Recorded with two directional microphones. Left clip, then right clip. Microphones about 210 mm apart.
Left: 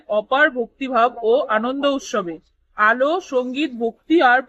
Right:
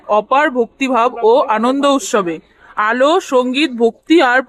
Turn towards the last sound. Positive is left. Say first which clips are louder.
# right 4 dB
turn(degrees=-45)  # may be behind; listen again after turning